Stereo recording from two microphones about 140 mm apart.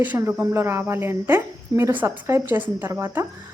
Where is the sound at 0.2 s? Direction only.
15° right (ahead or behind).